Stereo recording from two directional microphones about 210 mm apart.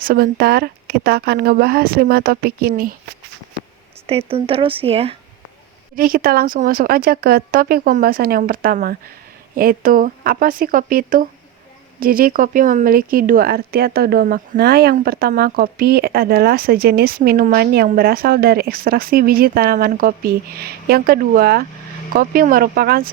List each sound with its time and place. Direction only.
0.0 s speech: 45° right (ahead or behind)
4.3 s speech: 25° right (ahead or behind)
6.0 s speech: 45° right (ahead or behind)